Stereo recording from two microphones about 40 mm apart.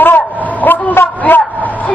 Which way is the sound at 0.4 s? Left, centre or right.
Left.